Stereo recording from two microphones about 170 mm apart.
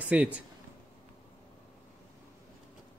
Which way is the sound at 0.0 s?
10° right (ahead or behind).